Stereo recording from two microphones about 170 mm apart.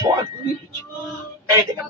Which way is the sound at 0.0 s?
20° right (ahead or behind).